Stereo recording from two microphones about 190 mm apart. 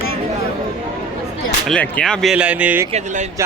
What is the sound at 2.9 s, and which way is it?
Speech, 35° right (ahead or behind).